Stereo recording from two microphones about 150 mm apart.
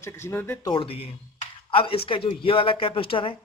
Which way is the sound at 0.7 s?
35° left (ahead or behind).